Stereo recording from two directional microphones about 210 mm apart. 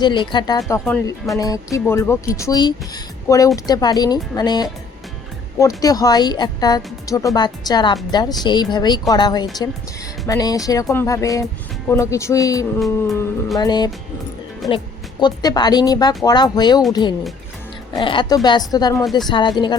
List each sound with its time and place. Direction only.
0.0 s speech: 20° left (ahead or behind)
14.6 s speech: centre (ahead or behind)
15.2 s speech: 20° left (ahead or behind)